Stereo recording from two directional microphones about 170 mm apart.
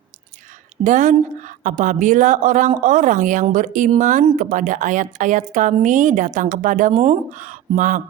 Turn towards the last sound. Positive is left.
turn(degrees=-50)  # may be behind; listen again after turning